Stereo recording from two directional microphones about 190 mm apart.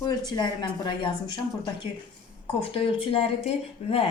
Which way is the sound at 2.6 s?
30° left (ahead or behind).